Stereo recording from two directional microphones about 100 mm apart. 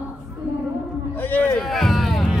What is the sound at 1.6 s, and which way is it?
Boat, centre (ahead or behind).